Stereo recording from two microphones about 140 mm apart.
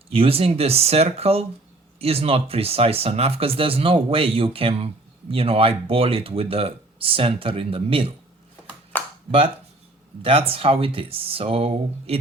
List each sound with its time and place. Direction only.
0.1 s speech: 45° right (ahead or behind)
8.9 s a sound: 10° left (ahead or behind)
10.2 s speech: 40° right (ahead or behind)